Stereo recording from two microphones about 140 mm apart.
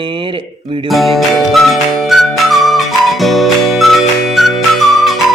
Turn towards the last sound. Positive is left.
turn(degrees=0)  # may be behind; listen again after turning